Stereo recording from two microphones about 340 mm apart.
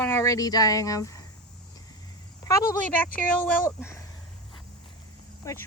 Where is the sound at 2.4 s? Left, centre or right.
Centre.